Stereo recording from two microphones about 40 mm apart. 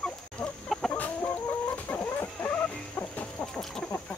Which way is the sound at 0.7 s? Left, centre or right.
Centre.